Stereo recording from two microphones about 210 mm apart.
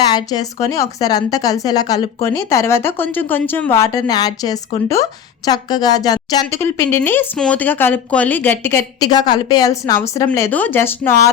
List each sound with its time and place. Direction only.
0.1 s a woman's voice: 20° left (ahead or behind)